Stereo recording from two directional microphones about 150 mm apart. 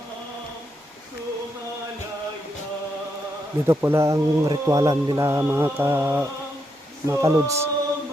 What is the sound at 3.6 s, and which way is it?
Speech, 15° right (ahead or behind).